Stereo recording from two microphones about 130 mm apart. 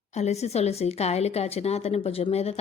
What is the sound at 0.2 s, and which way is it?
A woman's voice, 55° left (ahead or behind).